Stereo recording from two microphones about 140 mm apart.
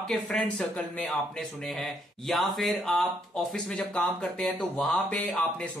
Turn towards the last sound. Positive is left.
turn(degrees=10)  # may be behind; listen again after turning